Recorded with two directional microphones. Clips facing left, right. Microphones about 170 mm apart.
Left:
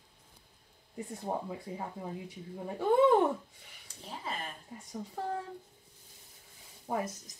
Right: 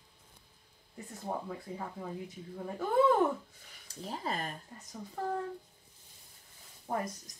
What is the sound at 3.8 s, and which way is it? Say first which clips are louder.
Speech: right 4 dB; 40° right (ahead or behind).